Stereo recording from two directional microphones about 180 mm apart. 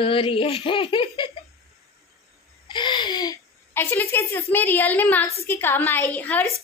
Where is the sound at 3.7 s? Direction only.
10° left (ahead or behind).